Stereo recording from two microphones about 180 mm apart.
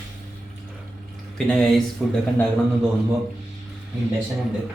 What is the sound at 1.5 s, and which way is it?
Speech, 5° left (ahead or behind).